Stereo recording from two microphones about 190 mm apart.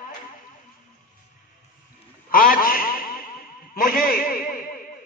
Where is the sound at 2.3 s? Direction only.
50° left (ahead or behind).